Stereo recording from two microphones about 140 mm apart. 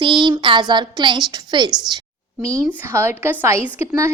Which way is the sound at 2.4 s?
20° right (ahead or behind).